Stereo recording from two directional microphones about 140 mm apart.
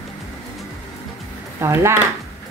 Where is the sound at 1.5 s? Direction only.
20° right (ahead or behind).